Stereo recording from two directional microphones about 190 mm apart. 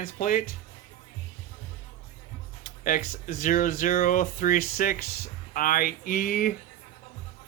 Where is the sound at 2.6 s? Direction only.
45° left (ahead or behind).